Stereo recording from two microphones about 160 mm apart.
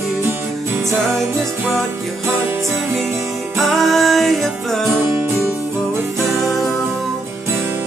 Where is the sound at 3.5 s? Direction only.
Centre (ahead or behind).